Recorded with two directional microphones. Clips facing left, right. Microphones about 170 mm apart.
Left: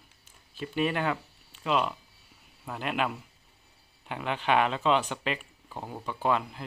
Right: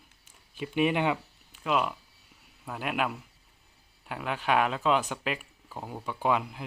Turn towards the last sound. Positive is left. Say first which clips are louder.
# even
turn(degrees=-10)  # may be behind; listen again after turning